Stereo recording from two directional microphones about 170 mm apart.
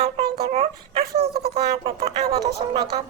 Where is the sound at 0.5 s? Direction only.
35° right (ahead or behind).